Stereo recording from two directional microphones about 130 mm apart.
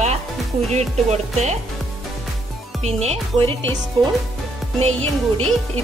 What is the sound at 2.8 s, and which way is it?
Speech, 55° right (ahead or behind).